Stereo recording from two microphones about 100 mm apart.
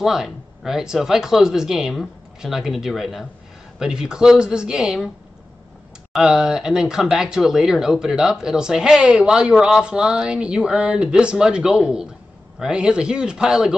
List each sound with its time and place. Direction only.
0.0 s speech: 5° right (ahead or behind)
6.1 s speech: 5° right (ahead or behind)